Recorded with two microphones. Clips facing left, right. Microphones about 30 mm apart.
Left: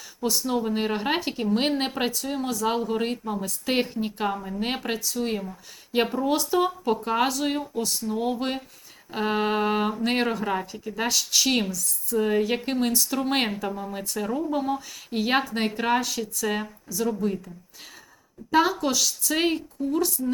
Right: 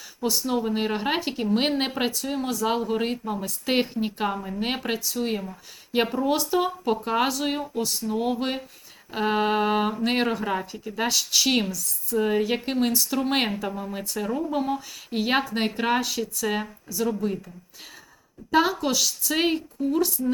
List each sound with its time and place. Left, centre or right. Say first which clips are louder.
0.2 s speech: even; centre
18.5 s speech: even; centre